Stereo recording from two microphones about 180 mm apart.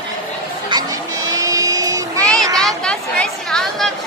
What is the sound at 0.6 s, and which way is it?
Music, 20° right (ahead or behind).